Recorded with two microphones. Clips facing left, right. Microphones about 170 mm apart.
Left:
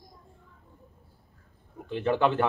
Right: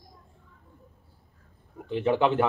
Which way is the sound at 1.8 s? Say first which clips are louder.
Right 2 dB; 15° right (ahead or behind).